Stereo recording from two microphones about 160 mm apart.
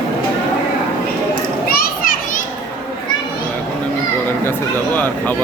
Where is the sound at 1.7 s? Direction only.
65° left (ahead or behind).